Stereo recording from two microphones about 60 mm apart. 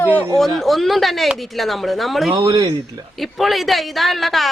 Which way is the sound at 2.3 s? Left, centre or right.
Right.